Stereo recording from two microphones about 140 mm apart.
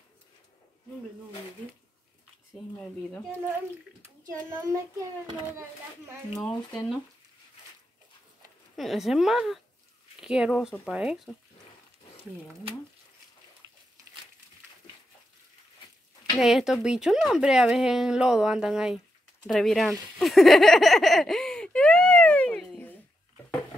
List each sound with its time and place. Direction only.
2.5 s speech: 5° left (ahead or behind)
6.4 s speech: 5° left (ahead or behind)
8.7 s speech: centre (ahead or behind)
16.3 s speech: 5° right (ahead or behind)
19.4 s a sound: centre (ahead or behind)